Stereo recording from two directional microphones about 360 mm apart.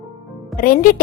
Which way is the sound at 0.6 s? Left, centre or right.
Left.